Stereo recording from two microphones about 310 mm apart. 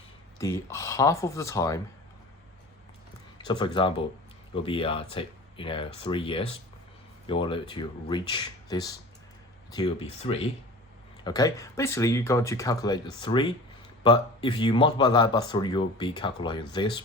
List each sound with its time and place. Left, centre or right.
0.3 s speech: centre
3.3 s speech: centre